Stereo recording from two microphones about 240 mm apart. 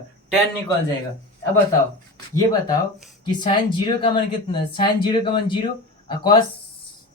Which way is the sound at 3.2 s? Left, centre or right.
Centre.